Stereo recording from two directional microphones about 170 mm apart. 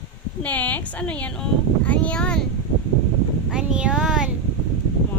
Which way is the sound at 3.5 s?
5° right (ahead or behind).